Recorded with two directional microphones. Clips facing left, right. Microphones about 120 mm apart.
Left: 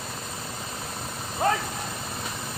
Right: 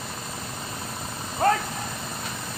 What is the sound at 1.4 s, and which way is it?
Vehicle, 5° left (ahead or behind).